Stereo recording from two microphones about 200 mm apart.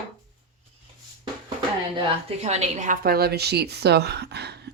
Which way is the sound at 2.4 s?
35° right (ahead or behind).